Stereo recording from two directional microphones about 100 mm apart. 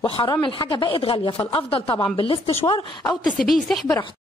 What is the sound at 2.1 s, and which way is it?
Speech, 60° left (ahead or behind).